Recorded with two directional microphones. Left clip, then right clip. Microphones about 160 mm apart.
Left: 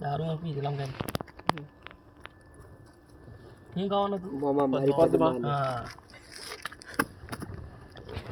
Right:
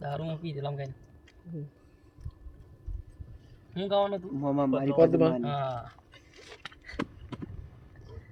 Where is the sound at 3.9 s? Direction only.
10° right (ahead or behind).